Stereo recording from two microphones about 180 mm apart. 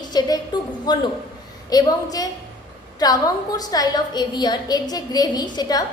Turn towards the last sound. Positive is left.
turn(degrees=20)  # may be behind; listen again after turning